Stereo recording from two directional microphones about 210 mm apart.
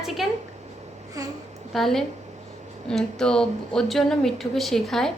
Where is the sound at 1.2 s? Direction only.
15° right (ahead or behind).